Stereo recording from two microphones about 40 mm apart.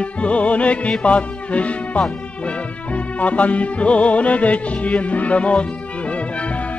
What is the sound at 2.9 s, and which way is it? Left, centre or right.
Music, left.